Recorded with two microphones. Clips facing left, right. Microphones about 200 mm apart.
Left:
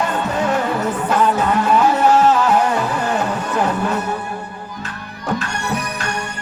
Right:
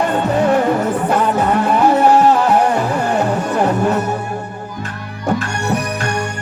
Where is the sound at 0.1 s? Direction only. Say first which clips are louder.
Right 5 dB; 55° right (ahead or behind).